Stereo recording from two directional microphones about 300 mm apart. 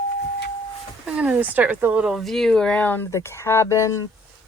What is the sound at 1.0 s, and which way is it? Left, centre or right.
Speech, centre.